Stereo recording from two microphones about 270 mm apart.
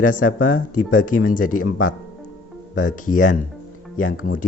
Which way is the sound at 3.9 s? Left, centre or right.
Left.